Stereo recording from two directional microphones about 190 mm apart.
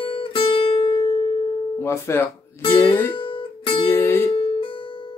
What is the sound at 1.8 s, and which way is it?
Speech, 15° left (ahead or behind).